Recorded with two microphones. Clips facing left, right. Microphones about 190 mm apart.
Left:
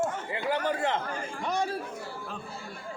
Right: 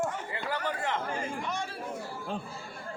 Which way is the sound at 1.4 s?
40° left (ahead or behind).